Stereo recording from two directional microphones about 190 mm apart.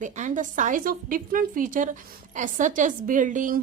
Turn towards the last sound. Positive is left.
turn(degrees=-45)  # may be behind; listen again after turning